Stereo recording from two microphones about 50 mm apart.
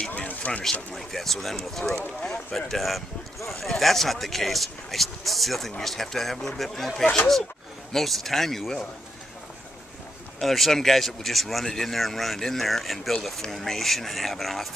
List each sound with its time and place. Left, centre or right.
0.1 s a sound: left
0.9 s speech: centre
10.4 s speech: centre